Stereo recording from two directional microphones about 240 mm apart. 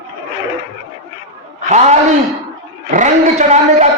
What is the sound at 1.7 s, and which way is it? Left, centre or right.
Speech, right.